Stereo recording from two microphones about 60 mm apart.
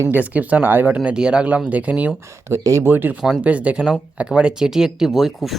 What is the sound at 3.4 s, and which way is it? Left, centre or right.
Speech, right.